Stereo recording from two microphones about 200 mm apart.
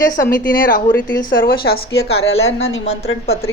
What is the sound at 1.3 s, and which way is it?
Speech, 45° left (ahead or behind).